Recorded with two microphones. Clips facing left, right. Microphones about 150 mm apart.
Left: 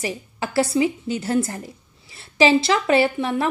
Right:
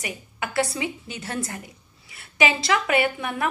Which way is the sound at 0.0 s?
30° left (ahead or behind).